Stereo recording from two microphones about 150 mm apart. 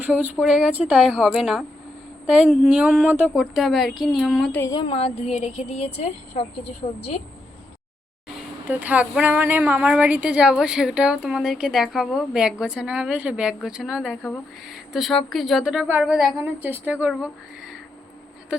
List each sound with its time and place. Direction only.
0.0 s a woman's voice: 10° right (ahead or behind)
4.6 s a woman's voice: 30° left (ahead or behind)
8.6 s a woman's voice: 10° right (ahead or behind)